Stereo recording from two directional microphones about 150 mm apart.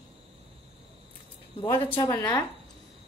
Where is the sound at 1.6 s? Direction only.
35° left (ahead or behind).